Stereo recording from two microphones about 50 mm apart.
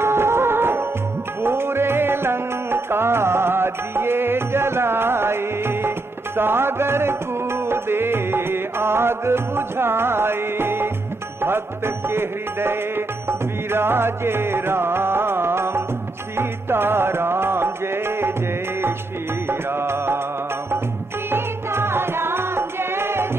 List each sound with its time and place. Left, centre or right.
0.0 s music: right
19.7 s music: right
21.3 s music: right